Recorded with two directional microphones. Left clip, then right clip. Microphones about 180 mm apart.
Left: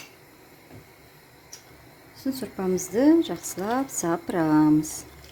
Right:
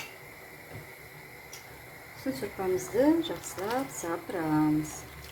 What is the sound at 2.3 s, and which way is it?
A woman's voice, 55° left (ahead or behind).